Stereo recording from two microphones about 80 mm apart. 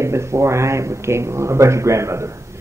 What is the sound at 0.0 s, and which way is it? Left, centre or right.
A man's voice, right.